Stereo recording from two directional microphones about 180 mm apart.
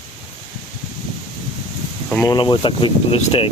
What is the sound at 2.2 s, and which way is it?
Speech, 25° left (ahead or behind).